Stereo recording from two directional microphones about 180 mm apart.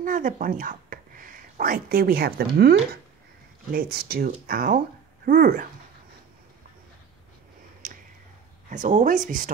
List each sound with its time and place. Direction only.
0.0 s speech: 50° right (ahead or behind)
3.7 s speech: 55° right (ahead or behind)
7.8 s a sound: 45° right (ahead or behind)
8.6 s speech: 45° right (ahead or behind)